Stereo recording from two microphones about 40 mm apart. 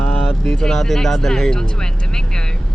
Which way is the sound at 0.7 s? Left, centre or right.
Centre.